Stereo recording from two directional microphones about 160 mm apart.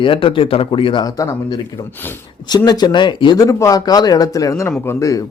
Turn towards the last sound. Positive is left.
turn(degrees=15)  # may be behind; listen again after turning